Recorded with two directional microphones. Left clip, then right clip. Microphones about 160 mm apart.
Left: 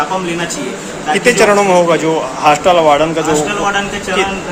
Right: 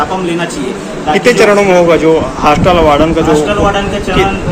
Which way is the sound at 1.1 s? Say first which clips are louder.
Right 3 dB; 10° left (ahead or behind).